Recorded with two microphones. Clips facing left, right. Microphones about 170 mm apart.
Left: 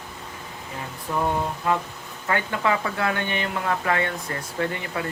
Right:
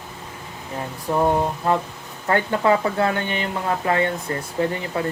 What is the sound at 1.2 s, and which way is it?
Speech, 40° right (ahead or behind).